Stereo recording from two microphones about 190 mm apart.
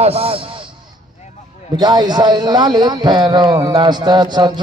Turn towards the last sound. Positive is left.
turn(degrees=-25)  # may be behind; listen again after turning